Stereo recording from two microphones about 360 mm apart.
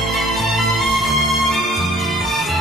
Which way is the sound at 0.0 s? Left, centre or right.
Centre.